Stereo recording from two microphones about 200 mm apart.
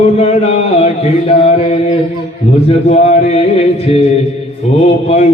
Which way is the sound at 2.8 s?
35° left (ahead or behind).